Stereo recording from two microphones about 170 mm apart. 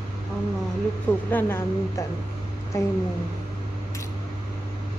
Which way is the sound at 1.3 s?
10° left (ahead or behind).